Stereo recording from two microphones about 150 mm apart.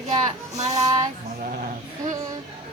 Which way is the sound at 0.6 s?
45° right (ahead or behind).